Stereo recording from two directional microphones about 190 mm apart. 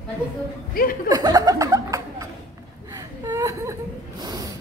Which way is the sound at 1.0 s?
20° right (ahead or behind).